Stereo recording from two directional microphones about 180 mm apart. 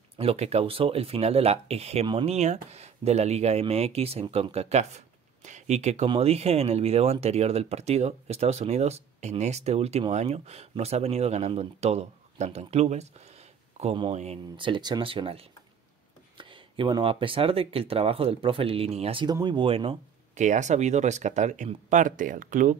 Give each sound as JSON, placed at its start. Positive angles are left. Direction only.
{"t": 0.2, "sound": "speech", "side_deg": -35}
{"t": 20.4, "sound": "speech", "side_deg": -40}